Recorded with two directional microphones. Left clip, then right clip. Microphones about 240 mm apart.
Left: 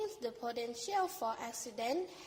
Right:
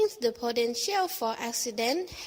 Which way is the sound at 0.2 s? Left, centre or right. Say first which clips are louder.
Right 12 dB; right.